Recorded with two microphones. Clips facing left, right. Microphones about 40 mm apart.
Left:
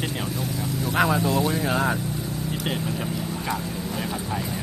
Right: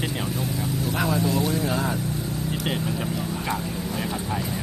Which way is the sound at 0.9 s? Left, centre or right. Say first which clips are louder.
Left 3 dB; left.